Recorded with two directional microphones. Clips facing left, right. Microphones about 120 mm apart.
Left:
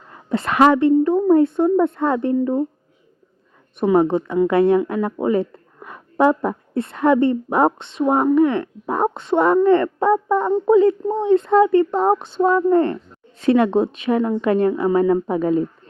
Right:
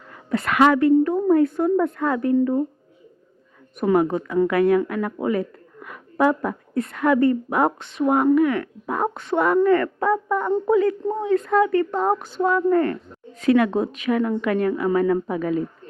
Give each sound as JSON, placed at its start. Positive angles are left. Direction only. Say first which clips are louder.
{"t": 0.1, "sound": "a woman's voice", "louder": "left 2 dB", "side_deg": 25}
{"t": 3.8, "sound": "a woman's voice", "louder": "left 3 dB", "side_deg": 25}